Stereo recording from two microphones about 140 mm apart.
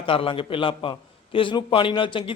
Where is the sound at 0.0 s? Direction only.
40° left (ahead or behind).